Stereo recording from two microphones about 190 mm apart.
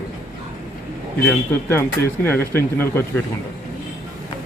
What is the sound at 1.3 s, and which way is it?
Speech, 10° left (ahead or behind).